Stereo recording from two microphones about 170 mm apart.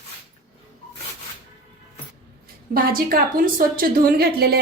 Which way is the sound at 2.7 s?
60° right (ahead or behind).